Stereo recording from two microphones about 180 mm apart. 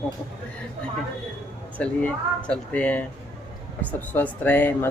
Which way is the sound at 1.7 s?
5° left (ahead or behind).